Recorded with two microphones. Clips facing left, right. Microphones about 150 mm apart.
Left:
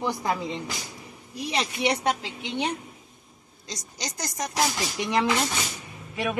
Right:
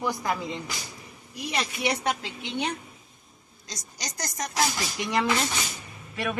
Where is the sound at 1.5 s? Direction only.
25° left (ahead or behind).